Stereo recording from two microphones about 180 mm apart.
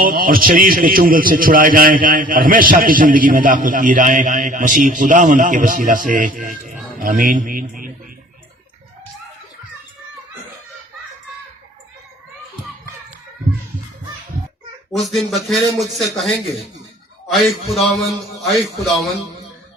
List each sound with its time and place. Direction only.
0.0 s a man's voice: 50° right (ahead or behind)
14.9 s a man's voice: centre (ahead or behind)